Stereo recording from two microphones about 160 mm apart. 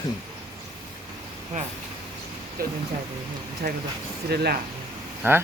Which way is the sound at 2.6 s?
65° right (ahead or behind).